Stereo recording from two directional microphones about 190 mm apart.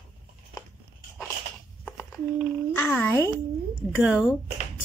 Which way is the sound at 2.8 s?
10° left (ahead or behind).